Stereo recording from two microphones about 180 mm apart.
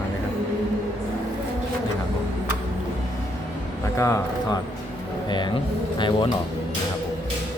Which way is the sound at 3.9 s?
15° left (ahead or behind).